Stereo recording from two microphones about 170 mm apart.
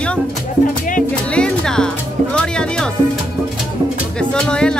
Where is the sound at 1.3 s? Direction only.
5° left (ahead or behind).